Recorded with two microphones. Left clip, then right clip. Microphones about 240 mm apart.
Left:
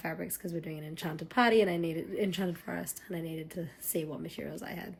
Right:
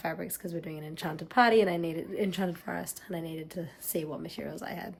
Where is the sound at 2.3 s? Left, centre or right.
Right.